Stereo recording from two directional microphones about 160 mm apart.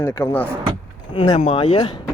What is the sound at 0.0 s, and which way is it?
Speech, 15° left (ahead or behind).